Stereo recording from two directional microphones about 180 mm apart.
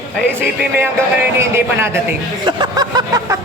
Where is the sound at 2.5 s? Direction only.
25° right (ahead or behind).